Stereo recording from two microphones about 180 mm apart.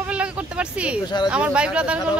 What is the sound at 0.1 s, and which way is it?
Vehicle, 5° right (ahead or behind).